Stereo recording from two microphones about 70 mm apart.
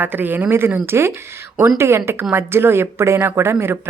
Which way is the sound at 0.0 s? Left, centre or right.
Right.